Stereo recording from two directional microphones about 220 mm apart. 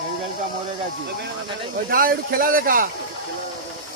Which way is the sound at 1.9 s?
40° right (ahead or behind).